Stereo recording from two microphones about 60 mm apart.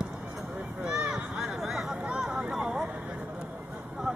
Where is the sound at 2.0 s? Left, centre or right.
Centre.